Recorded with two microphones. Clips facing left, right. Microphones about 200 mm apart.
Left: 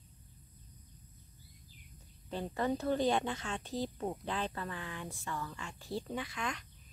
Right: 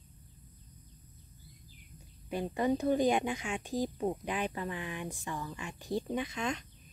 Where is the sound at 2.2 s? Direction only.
15° right (ahead or behind).